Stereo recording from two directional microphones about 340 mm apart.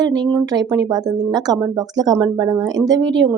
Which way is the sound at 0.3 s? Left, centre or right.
Centre.